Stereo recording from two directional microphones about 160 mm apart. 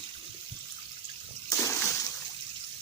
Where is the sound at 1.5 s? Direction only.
20° left (ahead or behind).